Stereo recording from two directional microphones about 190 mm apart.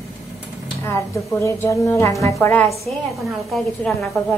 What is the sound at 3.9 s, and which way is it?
Speech, 5° left (ahead or behind).